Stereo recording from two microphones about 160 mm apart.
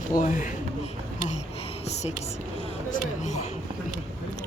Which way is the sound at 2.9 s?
50° left (ahead or behind).